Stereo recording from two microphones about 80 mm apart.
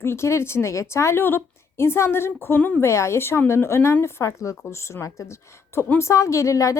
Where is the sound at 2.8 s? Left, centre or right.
Left.